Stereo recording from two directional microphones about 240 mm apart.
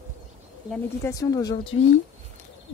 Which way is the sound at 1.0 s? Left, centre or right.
Centre.